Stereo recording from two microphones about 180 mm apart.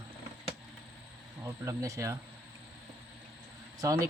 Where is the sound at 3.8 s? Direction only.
20° right (ahead or behind).